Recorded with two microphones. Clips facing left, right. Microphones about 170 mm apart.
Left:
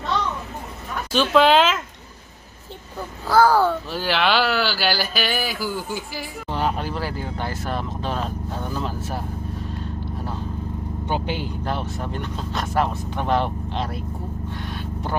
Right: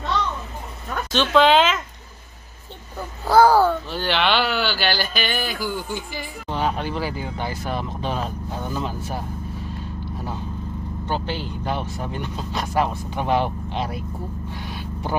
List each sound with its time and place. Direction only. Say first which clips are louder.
1.1 s speech: even; 5° left (ahead or behind)
3.3 s a child's voice: right 2 dB; 20° right (ahead or behind)
3.5 s speech: right 1 dB; centre (ahead or behind)
11.1 s speech: left 1 dB; 15° left (ahead or behind)
11.6 s speech: even; centre (ahead or behind)
14.5 s vehicle: left 1 dB; 5° right (ahead or behind)